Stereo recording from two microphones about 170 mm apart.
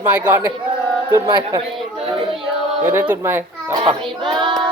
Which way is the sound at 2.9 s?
10° right (ahead or behind).